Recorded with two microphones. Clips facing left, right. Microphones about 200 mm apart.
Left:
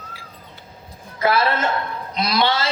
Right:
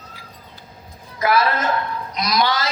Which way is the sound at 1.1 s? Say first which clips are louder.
Even; 30° left (ahead or behind).